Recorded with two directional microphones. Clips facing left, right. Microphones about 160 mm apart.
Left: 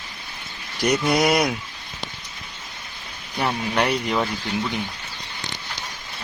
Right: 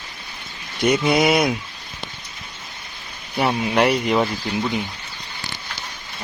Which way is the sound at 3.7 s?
5° right (ahead or behind).